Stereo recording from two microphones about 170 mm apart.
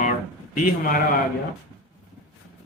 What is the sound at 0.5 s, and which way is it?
Speech, 55° left (ahead or behind).